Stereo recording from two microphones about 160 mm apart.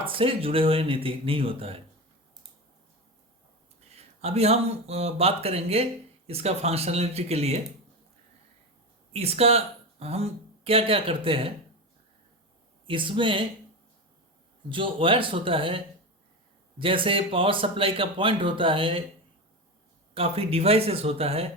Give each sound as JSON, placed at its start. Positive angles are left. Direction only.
{"t": 0.0, "sound": "speech", "side_deg": -35}
{"t": 3.9, "sound": "speech", "side_deg": -40}
{"t": 9.1, "sound": "speech", "side_deg": -40}
{"t": 12.9, "sound": "speech", "side_deg": -30}
{"t": 14.7, "sound": "speech", "side_deg": -35}
{"t": 20.1, "sound": "speech", "side_deg": -35}